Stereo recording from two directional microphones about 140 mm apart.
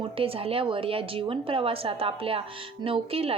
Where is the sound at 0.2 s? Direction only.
40° right (ahead or behind).